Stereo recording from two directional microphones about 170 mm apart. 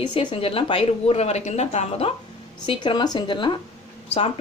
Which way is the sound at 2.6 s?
25° left (ahead or behind).